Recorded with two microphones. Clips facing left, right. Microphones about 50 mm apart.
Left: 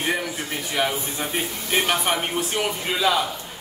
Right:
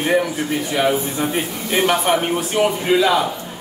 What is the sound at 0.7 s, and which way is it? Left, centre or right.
A man's voice, centre.